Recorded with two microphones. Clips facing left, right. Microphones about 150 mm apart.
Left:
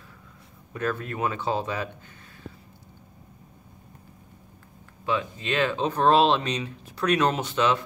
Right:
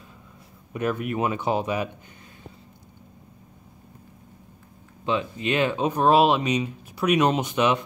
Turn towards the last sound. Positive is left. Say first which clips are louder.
# right 2 dB
turn(degrees=-15)  # may be behind; listen again after turning